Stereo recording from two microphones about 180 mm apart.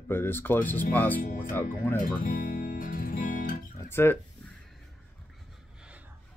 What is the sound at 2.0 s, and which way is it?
Guitar, 50° left (ahead or behind).